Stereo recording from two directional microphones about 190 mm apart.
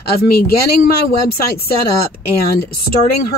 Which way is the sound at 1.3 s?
55° left (ahead or behind).